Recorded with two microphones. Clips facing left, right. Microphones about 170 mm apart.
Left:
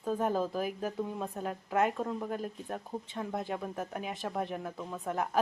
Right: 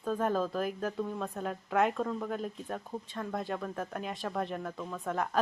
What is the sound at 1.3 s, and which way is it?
A woman's voice, 5° left (ahead or behind).